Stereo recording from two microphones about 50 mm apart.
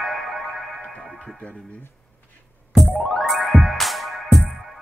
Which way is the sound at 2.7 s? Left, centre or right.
Centre.